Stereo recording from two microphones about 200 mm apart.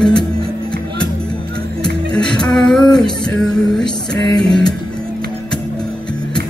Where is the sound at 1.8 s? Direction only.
5° left (ahead or behind).